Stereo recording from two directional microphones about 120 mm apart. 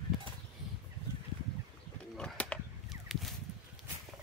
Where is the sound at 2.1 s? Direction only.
10° left (ahead or behind).